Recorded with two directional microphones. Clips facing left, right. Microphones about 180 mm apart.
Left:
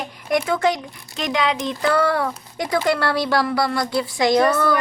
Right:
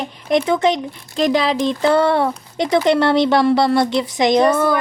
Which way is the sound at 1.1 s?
35° right (ahead or behind).